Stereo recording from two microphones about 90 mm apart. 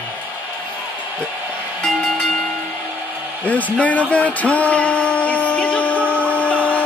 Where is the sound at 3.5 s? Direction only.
15° left (ahead or behind).